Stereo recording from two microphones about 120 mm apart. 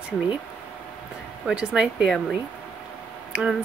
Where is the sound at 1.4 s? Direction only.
5° right (ahead or behind).